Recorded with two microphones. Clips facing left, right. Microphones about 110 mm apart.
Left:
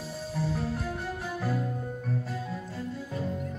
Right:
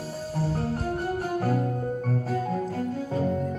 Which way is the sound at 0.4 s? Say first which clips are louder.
Right 3 dB; 40° right (ahead or behind).